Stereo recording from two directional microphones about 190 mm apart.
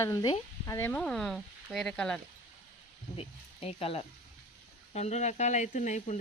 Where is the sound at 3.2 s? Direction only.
30° left (ahead or behind).